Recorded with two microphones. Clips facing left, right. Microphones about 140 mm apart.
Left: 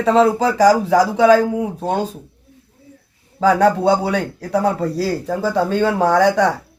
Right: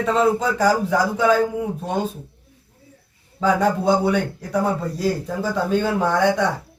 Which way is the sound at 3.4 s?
85° left.